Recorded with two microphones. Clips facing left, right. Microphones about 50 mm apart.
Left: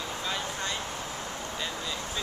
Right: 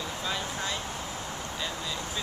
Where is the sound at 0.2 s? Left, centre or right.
Centre.